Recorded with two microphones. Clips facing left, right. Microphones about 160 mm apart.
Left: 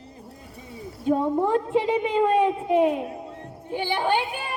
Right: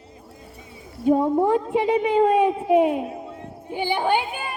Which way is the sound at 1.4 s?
10° right (ahead or behind).